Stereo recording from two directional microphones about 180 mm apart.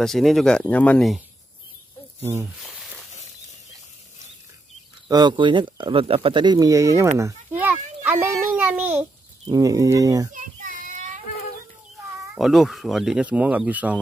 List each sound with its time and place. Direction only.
0.0 s speech: centre (ahead or behind)
5.0 s a child's voice: 25° right (ahead or behind)
9.5 s speech: 20° right (ahead or behind)
10.3 s child singing: 45° right (ahead or behind)
12.4 s speech: centre (ahead or behind)